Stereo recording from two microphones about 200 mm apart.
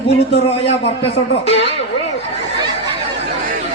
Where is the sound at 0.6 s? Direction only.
30° left (ahead or behind).